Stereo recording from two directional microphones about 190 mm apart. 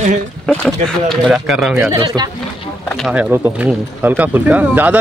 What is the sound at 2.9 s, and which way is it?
Speech, 5° right (ahead or behind).